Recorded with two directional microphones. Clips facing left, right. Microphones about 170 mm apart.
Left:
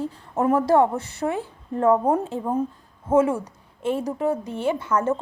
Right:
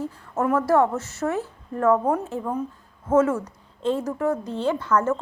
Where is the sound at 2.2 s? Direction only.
15° left (ahead or behind).